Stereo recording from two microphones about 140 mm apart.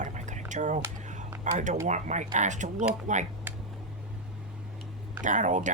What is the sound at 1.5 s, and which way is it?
Speech, 60° right (ahead or behind).